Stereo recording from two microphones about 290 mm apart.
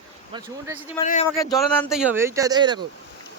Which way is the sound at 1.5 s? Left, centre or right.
Centre.